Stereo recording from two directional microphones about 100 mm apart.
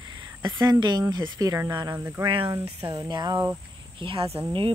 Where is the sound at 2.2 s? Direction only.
60° right (ahead or behind).